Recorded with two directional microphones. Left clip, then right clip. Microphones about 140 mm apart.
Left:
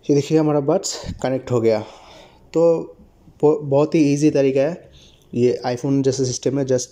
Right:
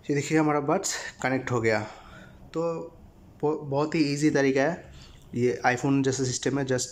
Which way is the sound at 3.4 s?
25° left (ahead or behind).